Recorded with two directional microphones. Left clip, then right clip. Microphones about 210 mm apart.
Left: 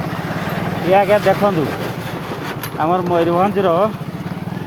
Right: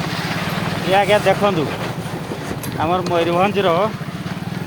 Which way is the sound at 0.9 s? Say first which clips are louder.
Left 2 dB; 30° left (ahead or behind).